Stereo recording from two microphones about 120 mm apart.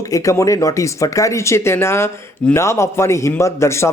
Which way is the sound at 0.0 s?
25° left (ahead or behind).